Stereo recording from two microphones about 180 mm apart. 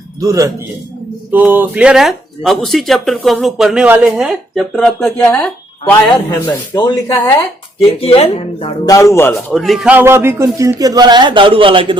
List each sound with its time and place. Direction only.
0.2 s a man's voice: 20° right (ahead or behind); by 5.1 s 5° left (ahead or behind)
5.1 s speech: 15° left (ahead or behind)
6.7 s speech: 25° left (ahead or behind)
8.9 s speech: 15° left (ahead or behind)
9.5 s a man's voice: centre (ahead or behind); by 11.9 s 30° right (ahead or behind)